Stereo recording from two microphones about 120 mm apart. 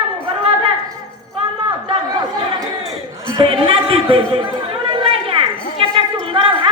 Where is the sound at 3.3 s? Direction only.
50° right (ahead or behind).